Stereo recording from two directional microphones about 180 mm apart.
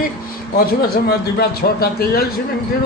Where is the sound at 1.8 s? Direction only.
60° left (ahead or behind).